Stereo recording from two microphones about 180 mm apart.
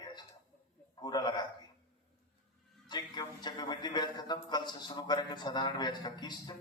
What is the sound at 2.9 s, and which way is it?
Speech, 25° left (ahead or behind).